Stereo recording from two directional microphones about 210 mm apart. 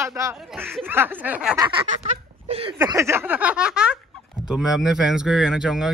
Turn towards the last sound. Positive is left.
turn(degrees=-5)  # may be behind; listen again after turning